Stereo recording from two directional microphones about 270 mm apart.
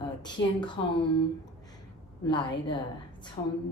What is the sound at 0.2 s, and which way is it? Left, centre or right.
Speech, centre.